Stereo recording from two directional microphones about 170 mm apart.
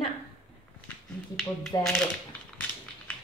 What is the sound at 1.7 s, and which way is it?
Speech, 25° left (ahead or behind).